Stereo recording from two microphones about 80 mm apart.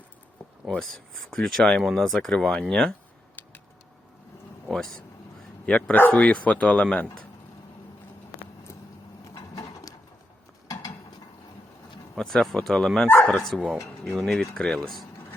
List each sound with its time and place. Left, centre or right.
0.8 s speech: centre
4.7 s speech: centre
9.2 s a sound: left
12.1 s speech: centre